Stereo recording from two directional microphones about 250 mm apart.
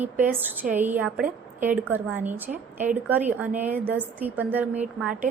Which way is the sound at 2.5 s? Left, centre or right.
Right.